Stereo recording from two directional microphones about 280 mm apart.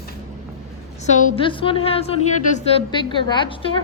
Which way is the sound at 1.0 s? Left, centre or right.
Left.